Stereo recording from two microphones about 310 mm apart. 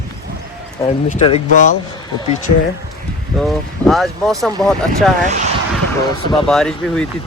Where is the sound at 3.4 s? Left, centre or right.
Centre.